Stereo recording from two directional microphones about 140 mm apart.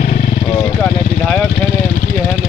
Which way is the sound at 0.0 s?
70° left (ahead or behind).